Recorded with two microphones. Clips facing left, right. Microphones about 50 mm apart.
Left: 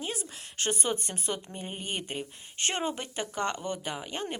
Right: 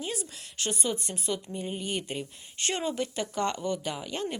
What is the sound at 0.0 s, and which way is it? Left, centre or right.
A woman's voice, left.